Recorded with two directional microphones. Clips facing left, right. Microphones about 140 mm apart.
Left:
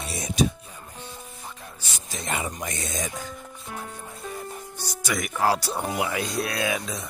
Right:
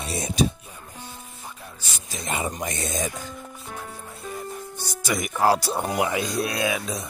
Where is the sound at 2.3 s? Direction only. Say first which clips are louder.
Right 3 dB; 25° right (ahead or behind).